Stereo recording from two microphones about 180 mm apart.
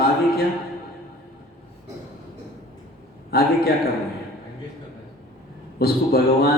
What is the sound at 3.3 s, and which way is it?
Speech, 60° left (ahead or behind).